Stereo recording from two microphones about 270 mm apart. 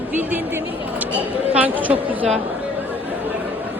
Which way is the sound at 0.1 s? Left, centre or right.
Centre.